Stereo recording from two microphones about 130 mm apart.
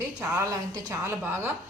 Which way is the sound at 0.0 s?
25° right (ahead or behind).